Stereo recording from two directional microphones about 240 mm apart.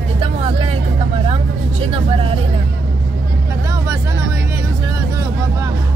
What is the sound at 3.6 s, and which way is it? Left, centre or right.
Speech, centre.